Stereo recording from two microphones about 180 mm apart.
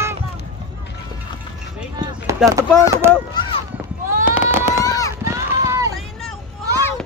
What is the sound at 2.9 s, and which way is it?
Speech, 15° right (ahead or behind).